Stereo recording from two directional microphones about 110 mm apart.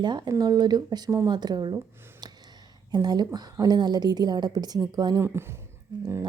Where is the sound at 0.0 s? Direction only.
45° right (ahead or behind).